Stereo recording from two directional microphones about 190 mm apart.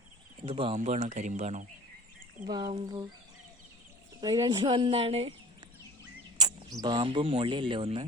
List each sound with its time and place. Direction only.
0.4 s speech: 30° right (ahead or behind)
0.8 s speech: 40° right (ahead or behind)
2.5 s speech: 20° right (ahead or behind)
4.2 s speech: 20° right (ahead or behind)
6.8 s speech: 25° right (ahead or behind)